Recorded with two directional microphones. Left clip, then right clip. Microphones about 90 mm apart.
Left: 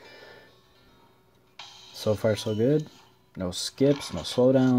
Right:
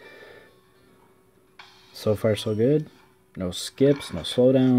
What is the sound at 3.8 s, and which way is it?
Speech, 30° left (ahead or behind).